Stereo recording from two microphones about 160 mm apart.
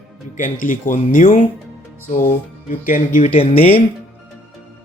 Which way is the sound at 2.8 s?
55° left (ahead or behind).